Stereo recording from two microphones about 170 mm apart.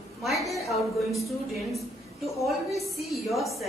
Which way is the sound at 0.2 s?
Centre (ahead or behind).